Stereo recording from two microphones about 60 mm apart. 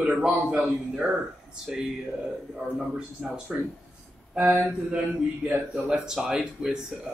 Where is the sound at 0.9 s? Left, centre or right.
Centre.